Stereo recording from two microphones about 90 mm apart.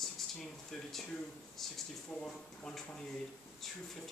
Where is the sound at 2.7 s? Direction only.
5° left (ahead or behind).